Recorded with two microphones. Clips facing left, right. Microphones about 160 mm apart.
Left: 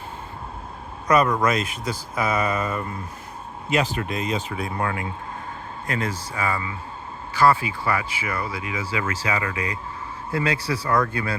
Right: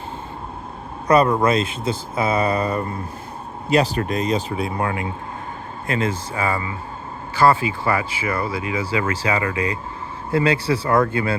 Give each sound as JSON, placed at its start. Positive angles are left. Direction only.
{"t": 1.0, "sound": "speech", "side_deg": -30}